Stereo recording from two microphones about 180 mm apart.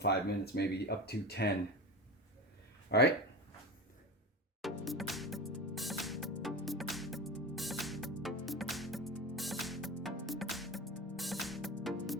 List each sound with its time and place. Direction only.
0.0 s speech: 65° left (ahead or behind)
2.9 s speech: 65° left (ahead or behind)
4.9 s music: centre (ahead or behind)